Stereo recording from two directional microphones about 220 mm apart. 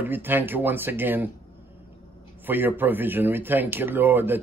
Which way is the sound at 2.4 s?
10° right (ahead or behind).